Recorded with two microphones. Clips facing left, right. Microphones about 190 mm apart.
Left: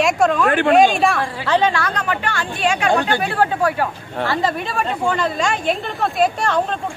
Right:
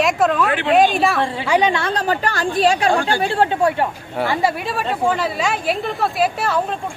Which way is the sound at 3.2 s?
25° right (ahead or behind).